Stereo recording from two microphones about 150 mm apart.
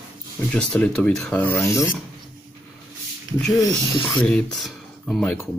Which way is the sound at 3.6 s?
30° left (ahead or behind).